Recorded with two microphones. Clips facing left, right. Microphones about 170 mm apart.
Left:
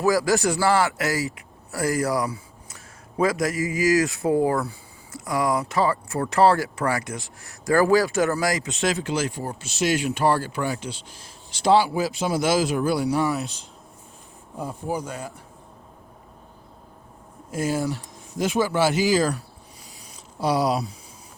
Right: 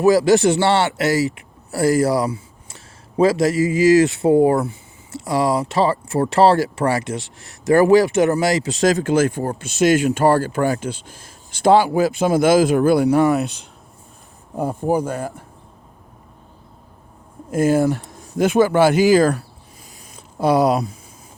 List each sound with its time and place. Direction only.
0.0 s a man's voice: 25° right (ahead or behind); by 13.7 s 65° right (ahead or behind)
14.8 s speech: 55° right (ahead or behind)
17.5 s speech: 55° right (ahead or behind)